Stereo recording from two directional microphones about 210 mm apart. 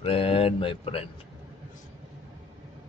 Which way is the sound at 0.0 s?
25° left (ahead or behind).